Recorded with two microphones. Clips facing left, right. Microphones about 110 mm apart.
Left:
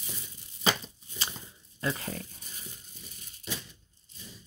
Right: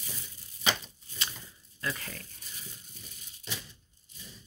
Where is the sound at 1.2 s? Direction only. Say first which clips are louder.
Left 2 dB; 25° left (ahead or behind).